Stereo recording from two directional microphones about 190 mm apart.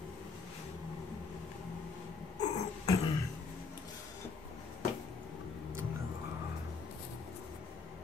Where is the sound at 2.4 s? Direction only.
30° left (ahead or behind).